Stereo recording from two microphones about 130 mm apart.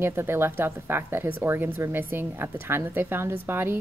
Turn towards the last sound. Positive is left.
turn(degrees=-15)  # may be behind; listen again after turning